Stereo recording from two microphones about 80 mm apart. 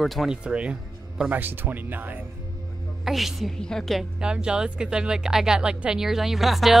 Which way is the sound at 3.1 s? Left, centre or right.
Centre.